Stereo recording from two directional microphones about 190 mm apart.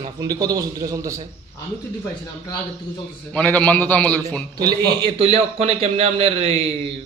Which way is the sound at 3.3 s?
5° left (ahead or behind).